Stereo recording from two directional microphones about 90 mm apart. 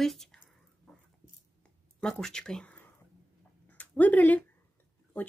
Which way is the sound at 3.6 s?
15° left (ahead or behind).